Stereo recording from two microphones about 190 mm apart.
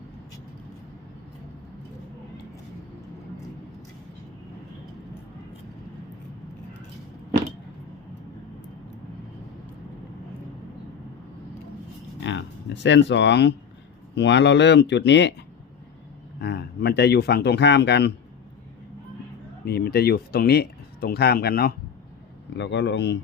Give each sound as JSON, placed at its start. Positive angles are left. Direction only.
{"t": 12.2, "sound": "a sound", "side_deg": 70}
{"t": 14.2, "sound": "speech", "side_deg": 65}
{"t": 16.4, "sound": "speech", "side_deg": 60}
{"t": 19.6, "sound": "speech", "side_deg": 55}
{"t": 22.5, "sound": "speech", "side_deg": 70}